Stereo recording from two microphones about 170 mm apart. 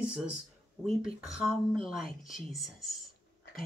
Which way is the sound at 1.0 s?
5° right (ahead or behind).